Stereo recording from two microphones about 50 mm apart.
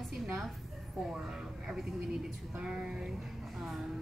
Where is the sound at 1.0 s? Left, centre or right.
Centre.